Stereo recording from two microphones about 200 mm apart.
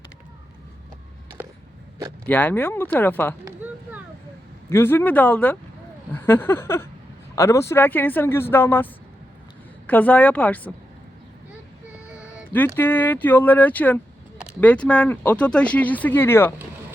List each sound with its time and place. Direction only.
2.2 s speech: 10° left (ahead or behind)
4.7 s speech: 10° left (ahead or behind)
12.1 s cat: 5° right (ahead or behind)
12.5 s speech: 10° left (ahead or behind)